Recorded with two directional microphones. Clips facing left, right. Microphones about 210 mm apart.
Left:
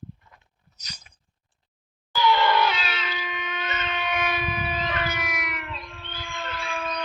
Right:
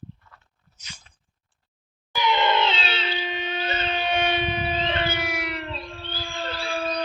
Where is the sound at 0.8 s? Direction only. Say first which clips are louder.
Left 1 dB; 40° left (ahead or behind).